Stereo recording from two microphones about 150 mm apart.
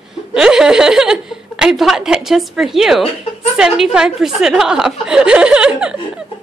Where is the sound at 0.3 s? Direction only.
5° right (ahead or behind).